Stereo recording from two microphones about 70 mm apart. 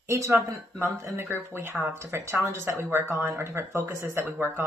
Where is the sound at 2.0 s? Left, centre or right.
Right.